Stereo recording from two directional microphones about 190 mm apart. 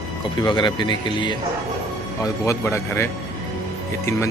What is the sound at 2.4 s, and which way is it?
Speech, 15° left (ahead or behind).